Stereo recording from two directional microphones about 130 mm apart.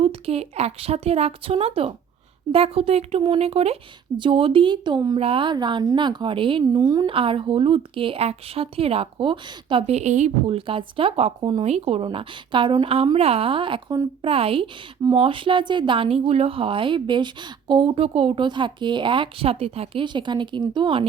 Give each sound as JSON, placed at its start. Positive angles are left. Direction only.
{"t": 0.0, "sound": "speech", "side_deg": -50}
{"t": 6.8, "sound": "a woman's voice", "side_deg": -30}
{"t": 7.1, "sound": "speech", "side_deg": -45}
{"t": 10.7, "sound": "speech", "side_deg": -45}
{"t": 11.6, "sound": "speech", "side_deg": -55}